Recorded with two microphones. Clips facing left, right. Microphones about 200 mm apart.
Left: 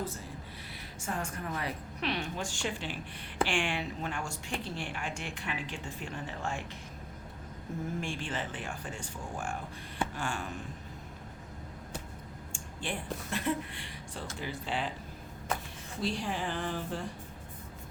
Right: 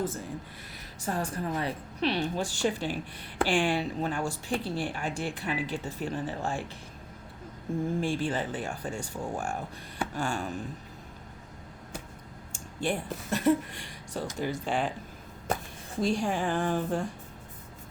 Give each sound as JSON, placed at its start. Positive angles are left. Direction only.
{"t": 1.0, "sound": "speech", "side_deg": -35}
{"t": 8.0, "sound": "speech", "side_deg": -40}
{"t": 12.5, "sound": "a sound", "side_deg": -40}
{"t": 13.3, "sound": "a woman's voice", "side_deg": -45}
{"t": 16.0, "sound": "a woman's voice", "side_deg": -45}